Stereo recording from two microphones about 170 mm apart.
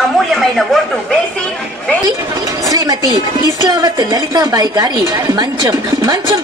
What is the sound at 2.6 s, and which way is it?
A woman's voice, 20° right (ahead or behind).